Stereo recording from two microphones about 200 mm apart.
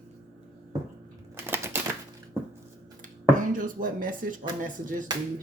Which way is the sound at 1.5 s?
10° right (ahead or behind).